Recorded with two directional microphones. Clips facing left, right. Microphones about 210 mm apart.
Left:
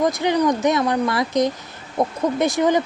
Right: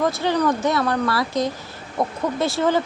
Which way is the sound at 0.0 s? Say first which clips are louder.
Left 2 dB; 15° left (ahead or behind).